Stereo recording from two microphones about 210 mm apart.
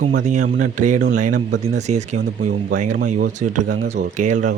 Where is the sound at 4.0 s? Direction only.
35° right (ahead or behind).